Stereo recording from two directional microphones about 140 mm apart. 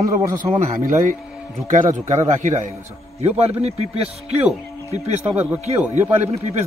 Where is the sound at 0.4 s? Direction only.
70° right (ahead or behind).